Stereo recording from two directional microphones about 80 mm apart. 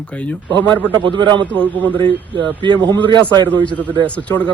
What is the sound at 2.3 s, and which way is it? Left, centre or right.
Speech, right.